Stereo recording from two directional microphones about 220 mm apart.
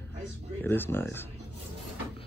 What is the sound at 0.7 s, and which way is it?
Speech, 10° left (ahead or behind).